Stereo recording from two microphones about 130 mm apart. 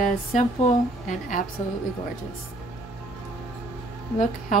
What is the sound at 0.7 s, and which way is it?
Speech, 70° left (ahead or behind).